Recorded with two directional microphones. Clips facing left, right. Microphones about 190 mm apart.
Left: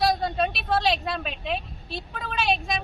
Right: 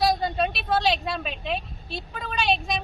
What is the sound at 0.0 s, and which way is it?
A woman's voice, centre (ahead or behind).